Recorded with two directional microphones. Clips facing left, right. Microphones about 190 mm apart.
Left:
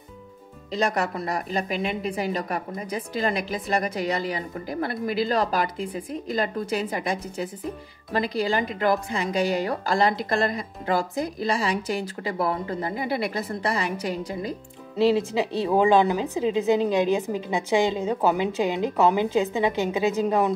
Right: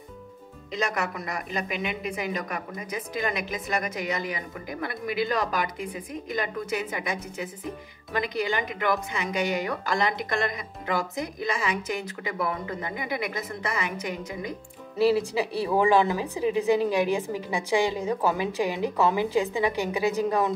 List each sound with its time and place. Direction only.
0.7 s a woman's voice: 35° left (ahead or behind)
15.0 s a woman's voice: 20° left (ahead or behind)